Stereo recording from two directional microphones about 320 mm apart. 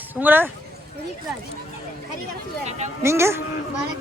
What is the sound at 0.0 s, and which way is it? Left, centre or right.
Speech, centre.